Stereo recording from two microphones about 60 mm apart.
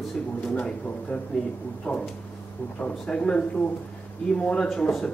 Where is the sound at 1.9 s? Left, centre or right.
Left.